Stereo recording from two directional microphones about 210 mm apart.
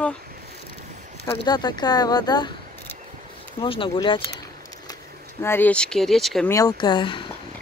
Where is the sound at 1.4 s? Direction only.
20° left (ahead or behind).